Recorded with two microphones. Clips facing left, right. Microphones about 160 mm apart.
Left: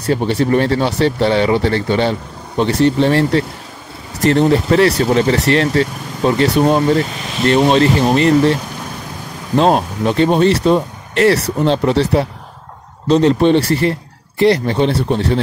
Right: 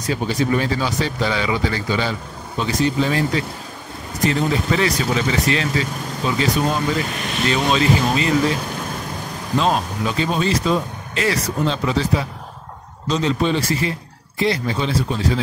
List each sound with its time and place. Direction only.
0.0 s speech: 60° left (ahead or behind)
9.8 s speech: 60° left (ahead or behind)